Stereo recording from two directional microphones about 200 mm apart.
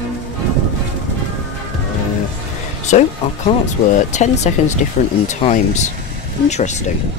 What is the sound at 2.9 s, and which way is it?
Speech, 35° left (ahead or behind).